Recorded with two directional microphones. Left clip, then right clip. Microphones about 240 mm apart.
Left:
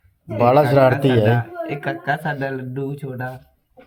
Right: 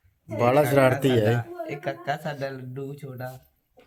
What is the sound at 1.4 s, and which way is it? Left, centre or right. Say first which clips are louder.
Speech: left 7 dB; centre.